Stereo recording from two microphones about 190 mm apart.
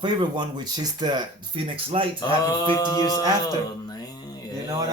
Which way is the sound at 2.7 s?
20° left (ahead or behind).